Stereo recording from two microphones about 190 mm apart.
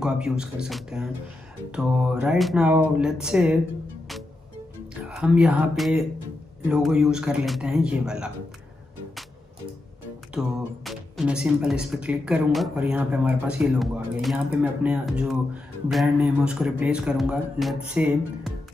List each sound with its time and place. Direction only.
0.0 s speech: 5° right (ahead or behind)
5.0 s speech: 5° right (ahead or behind)
10.3 s speech: centre (ahead or behind)